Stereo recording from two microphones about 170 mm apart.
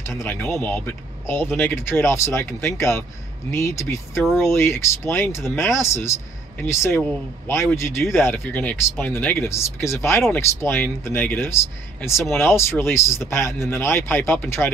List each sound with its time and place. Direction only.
0.2 s speech: 10° left (ahead or behind)